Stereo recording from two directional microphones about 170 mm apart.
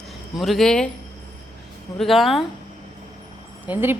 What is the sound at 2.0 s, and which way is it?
Speech, centre (ahead or behind).